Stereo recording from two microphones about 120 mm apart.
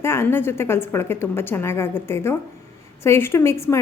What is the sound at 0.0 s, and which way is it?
A woman's voice, 20° left (ahead or behind).